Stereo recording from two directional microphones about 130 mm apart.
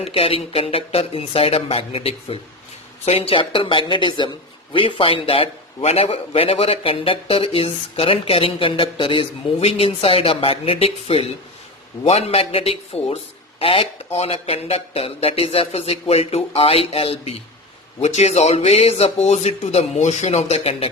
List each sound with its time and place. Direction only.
0.0 s a woman's voice: 50° left (ahead or behind)